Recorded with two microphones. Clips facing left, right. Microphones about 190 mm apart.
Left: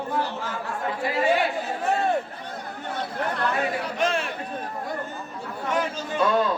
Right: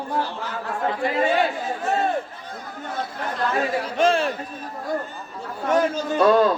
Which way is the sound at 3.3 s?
65° left (ahead or behind).